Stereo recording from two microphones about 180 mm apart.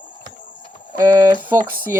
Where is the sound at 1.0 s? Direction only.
15° right (ahead or behind).